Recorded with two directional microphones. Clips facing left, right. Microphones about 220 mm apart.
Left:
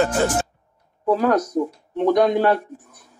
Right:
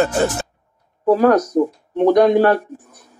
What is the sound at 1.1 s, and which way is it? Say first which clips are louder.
Music: right 5 dB; 45° right (ahead or behind).